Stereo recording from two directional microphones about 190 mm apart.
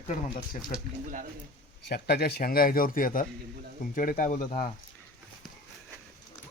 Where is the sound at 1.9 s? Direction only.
55° left (ahead or behind).